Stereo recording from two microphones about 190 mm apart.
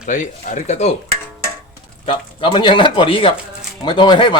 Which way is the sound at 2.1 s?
25° left (ahead or behind).